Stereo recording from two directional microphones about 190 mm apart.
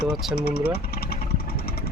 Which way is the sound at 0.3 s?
55° left (ahead or behind).